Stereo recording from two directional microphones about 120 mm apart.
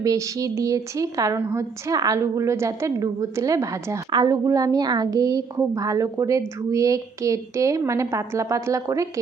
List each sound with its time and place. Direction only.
0.0 s a woman's voice: 25° right (ahead or behind)